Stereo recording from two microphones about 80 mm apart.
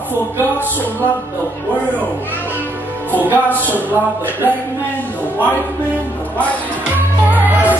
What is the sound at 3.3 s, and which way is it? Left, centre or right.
Music, left.